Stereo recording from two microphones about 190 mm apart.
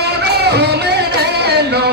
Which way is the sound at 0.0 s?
60° right (ahead or behind).